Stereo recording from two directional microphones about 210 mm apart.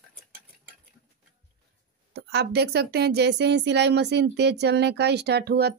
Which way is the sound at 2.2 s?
50° right (ahead or behind).